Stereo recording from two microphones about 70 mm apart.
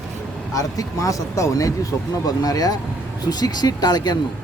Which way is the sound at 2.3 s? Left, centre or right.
Left.